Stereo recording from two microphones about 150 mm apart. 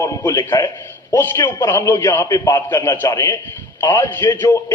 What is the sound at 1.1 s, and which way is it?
A man's voice, 15° left (ahead or behind).